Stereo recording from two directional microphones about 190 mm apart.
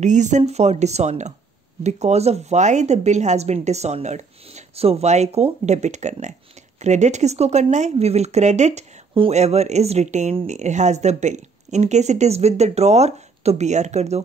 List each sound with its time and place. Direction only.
0.0 s speech: 40° right (ahead or behind)